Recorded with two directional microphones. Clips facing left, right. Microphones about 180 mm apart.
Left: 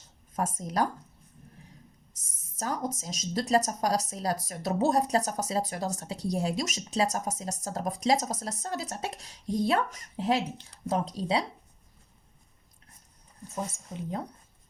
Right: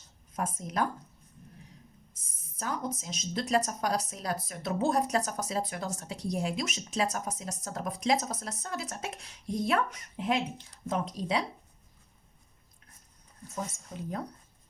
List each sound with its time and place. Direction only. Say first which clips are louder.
0.3 s a woman's voice: left 3 dB; 40° left (ahead or behind)
2.6 s a woman's voice: left 2 dB; 40° left (ahead or behind)